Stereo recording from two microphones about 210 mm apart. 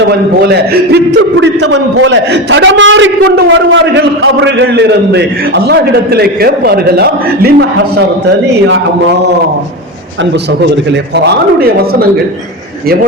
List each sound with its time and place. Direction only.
1.4 s a man's voice: 60° right (ahead or behind)